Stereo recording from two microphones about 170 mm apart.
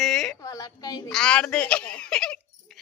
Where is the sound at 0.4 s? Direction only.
20° left (ahead or behind).